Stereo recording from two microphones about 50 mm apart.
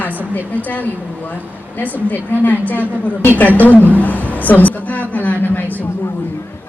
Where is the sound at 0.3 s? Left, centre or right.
Left.